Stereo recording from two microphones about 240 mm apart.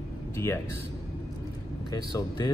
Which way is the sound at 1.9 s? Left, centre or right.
Centre.